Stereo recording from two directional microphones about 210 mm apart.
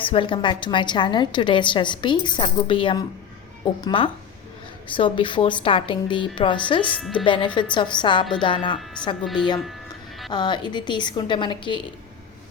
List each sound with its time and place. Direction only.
0.0 s a woman's voice: 25° left (ahead or behind)
9.2 s a woman's voice: centre (ahead or behind)
10.3 s a woman's voice: 20° left (ahead or behind)